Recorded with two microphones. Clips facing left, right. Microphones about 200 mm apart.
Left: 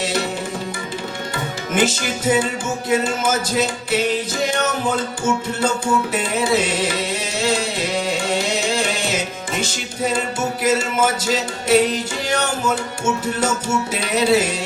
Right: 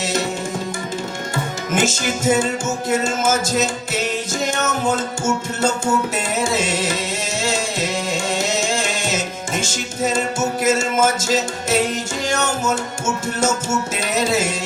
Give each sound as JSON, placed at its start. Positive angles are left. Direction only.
{"t": 1.7, "sound": "music", "side_deg": -45}
{"t": 13.9, "sound": "music", "side_deg": -45}